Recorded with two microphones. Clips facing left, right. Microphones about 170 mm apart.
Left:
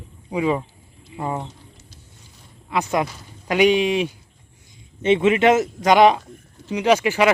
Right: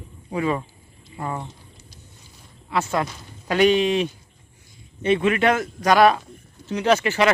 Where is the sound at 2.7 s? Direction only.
15° left (ahead or behind).